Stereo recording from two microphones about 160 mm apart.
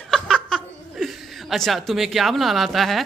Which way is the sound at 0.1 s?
5° left (ahead or behind).